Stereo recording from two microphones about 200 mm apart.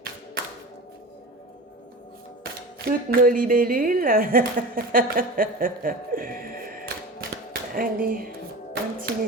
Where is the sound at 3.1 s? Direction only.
45° right (ahead or behind).